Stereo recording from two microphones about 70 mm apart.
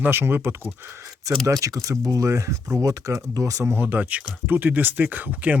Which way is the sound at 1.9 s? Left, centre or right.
Right.